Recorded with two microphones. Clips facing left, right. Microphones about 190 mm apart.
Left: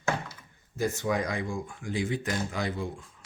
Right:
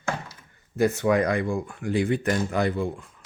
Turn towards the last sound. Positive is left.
turn(degrees=-60)  # may be behind; listen again after turning